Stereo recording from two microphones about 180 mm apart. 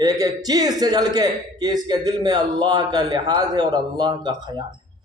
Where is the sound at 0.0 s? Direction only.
20° right (ahead or behind).